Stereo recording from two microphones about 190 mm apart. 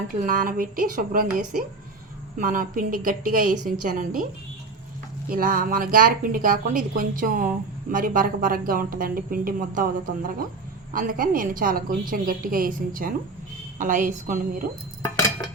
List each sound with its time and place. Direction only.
0.1 s speech: 45° right (ahead or behind)
2.4 s speech: 45° right (ahead or behind)
5.3 s speech: 50° right (ahead or behind)